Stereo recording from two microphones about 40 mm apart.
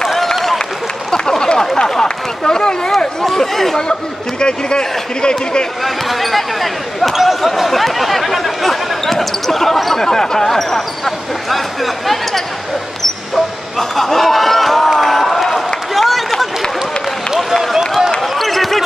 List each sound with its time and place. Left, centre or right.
0.1 s applause: centre
1.4 s a sound: centre
1.8 s run: centre
3.3 s speech: centre
4.4 s speech: left
5.9 s speech: centre
13.0 s basketball bounce: centre
15.0 s a sound: centre
17.7 s a sound: centre
18.2 s basketball bounce: centre